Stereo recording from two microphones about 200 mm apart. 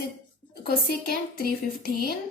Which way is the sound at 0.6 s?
50° left (ahead or behind).